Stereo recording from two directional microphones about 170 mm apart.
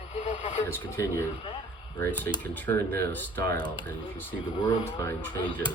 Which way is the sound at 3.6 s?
55° right (ahead or behind).